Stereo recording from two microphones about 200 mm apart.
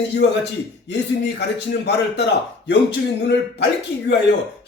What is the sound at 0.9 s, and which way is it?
A man's voice, 55° left (ahead or behind).